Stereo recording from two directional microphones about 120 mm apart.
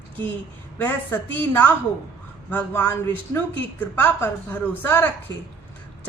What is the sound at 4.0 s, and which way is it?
A man's voice, 15° left (ahead or behind).